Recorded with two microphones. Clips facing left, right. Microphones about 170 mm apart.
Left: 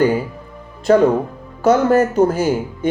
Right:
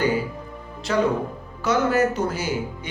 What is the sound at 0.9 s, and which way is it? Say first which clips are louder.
A man's voice: left 9 dB; 50° left (ahead or behind).